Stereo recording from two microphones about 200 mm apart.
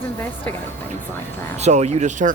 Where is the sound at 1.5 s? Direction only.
35° right (ahead or behind).